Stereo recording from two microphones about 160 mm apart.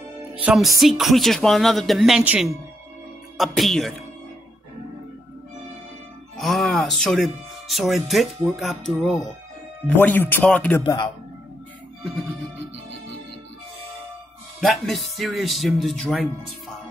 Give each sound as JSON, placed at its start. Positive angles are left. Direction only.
{"t": 0.3, "sound": "speech", "side_deg": -5}
{"t": 6.3, "sound": "speech", "side_deg": 0}
{"t": 9.8, "sound": "speech", "side_deg": 10}
{"t": 10.8, "sound": "a man's voice", "side_deg": 25}
{"t": 14.6, "sound": "speech", "side_deg": 0}